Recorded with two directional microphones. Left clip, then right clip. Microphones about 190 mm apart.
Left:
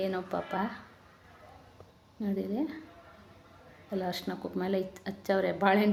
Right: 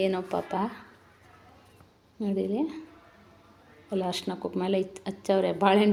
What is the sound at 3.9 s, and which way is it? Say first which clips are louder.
A woman's voice: right 4 dB; 15° right (ahead or behind).